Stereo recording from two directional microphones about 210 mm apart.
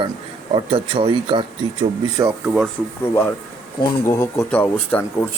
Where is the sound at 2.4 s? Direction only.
Centre (ahead or behind).